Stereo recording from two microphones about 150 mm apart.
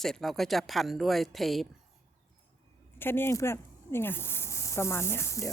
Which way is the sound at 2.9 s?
15° left (ahead or behind).